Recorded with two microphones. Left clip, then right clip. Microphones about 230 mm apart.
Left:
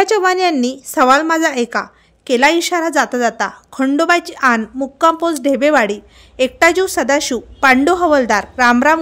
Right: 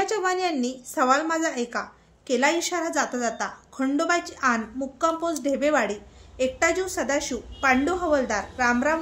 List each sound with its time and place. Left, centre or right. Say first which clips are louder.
0.0 s a woman's voice: left 11 dB; left